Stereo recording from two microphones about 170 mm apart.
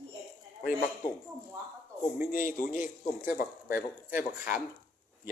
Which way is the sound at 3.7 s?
10° right (ahead or behind).